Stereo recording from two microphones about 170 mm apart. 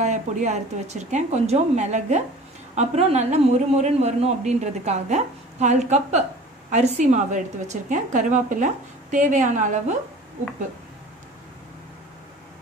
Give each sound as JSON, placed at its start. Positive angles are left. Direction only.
{"t": 0.0, "sound": "a woman's voice", "side_deg": -45}